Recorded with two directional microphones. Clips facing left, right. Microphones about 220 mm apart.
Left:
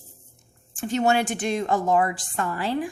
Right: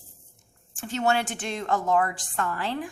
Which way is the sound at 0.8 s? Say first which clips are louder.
Left 4 dB; 15° left (ahead or behind).